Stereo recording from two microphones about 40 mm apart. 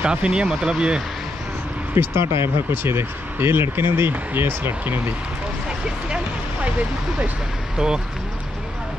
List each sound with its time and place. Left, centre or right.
0.0 s speech: right
2.0 s speech: right
4.4 s speech: right
6.0 s a sound: right
7.7 s speech: centre